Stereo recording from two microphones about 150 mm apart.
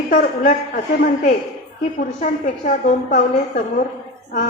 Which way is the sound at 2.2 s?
55° left (ahead or behind).